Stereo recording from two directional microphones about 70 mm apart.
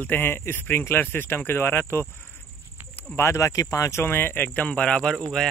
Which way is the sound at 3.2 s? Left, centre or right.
Left.